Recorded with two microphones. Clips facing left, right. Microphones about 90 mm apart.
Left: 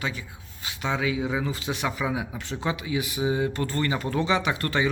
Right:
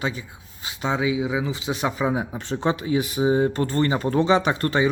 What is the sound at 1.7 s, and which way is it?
Speech, 30° right (ahead or behind).